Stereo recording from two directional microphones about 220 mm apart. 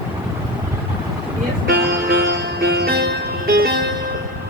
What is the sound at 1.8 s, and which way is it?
Music, 45° right (ahead or behind).